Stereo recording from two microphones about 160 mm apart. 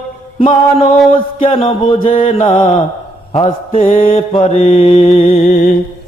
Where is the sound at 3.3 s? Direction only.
40° left (ahead or behind).